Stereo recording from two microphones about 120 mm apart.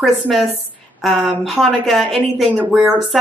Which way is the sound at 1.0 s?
Centre (ahead or behind).